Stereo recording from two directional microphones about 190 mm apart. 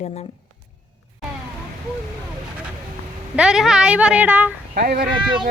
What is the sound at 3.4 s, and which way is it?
A woman's voice, 5° right (ahead or behind).